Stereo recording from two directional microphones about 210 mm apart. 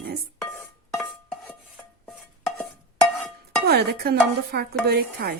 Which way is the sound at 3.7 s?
50° right (ahead or behind).